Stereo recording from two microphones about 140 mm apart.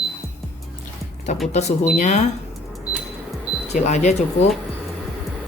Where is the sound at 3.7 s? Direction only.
55° left (ahead or behind).